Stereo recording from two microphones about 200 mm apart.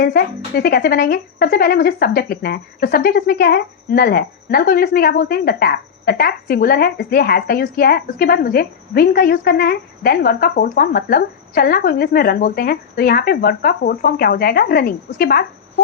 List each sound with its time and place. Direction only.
0.0 s speech: 50° left (ahead or behind)